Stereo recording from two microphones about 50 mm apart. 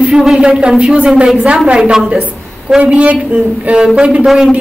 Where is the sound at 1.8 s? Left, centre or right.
Centre.